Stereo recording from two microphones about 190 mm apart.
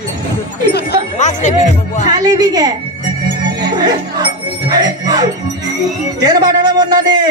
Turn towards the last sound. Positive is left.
turn(degrees=-20)  # may be behind; listen again after turning